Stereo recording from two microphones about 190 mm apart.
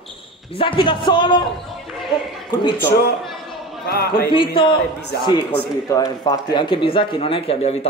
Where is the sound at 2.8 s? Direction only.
55° left (ahead or behind).